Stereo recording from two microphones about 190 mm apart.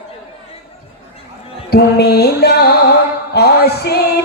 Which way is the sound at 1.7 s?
60° left (ahead or behind).